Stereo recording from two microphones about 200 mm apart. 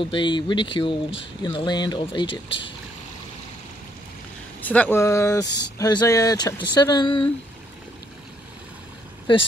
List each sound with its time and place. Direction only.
0.0 s speech: 25° left (ahead or behind)
4.6 s speech: 10° left (ahead or behind)
9.3 s speech: 25° left (ahead or behind)